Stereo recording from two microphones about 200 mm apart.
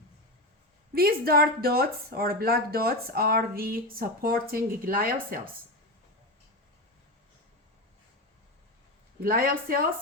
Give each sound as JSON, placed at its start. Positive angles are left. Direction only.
{"t": 0.9, "sound": "speech", "side_deg": -50}
{"t": 9.2, "sound": "speech", "side_deg": -45}